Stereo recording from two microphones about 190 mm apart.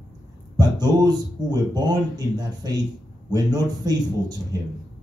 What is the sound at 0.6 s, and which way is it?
A man's voice, 20° right (ahead or behind).